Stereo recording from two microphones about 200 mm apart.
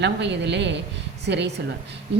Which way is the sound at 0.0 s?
60° right (ahead or behind).